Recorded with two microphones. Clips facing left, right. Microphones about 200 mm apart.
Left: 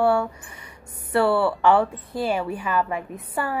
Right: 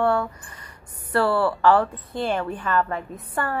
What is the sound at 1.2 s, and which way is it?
Speech, 25° left (ahead or behind).